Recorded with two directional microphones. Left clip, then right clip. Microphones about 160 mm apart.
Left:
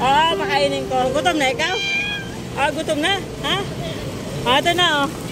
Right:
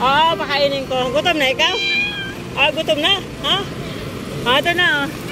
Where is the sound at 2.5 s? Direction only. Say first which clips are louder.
Right 4 dB; 15° left (ahead or behind).